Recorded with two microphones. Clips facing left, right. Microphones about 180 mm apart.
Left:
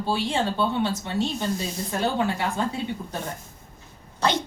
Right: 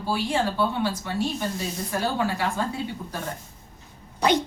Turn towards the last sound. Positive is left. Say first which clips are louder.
# right 3 dB
turn(degrees=-15)  # may be behind; listen again after turning